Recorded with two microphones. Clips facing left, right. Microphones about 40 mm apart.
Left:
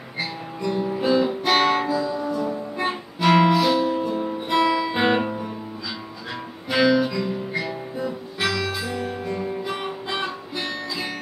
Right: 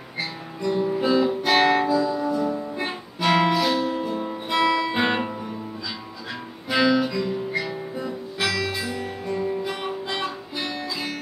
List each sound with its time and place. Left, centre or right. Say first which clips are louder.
0.2 s guitar: left 1 dB; centre
6.7 s guitar: left 1 dB; centre